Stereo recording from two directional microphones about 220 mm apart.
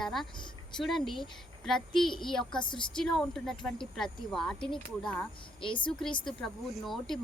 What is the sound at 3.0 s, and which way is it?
A woman's voice, centre (ahead or behind).